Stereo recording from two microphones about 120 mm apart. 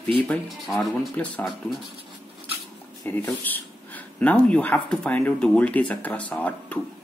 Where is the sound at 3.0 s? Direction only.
15° left (ahead or behind).